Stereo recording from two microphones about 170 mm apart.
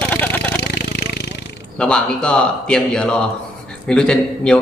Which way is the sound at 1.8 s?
5° left (ahead or behind).